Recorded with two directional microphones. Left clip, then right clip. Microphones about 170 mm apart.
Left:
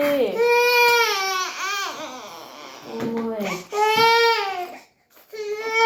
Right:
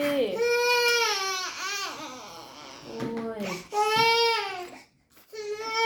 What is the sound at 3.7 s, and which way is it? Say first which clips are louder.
Baby cry: left 6 dB; centre (ahead or behind).